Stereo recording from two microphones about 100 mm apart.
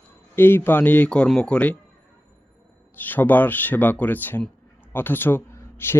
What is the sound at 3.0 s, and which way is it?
Speech, 20° left (ahead or behind).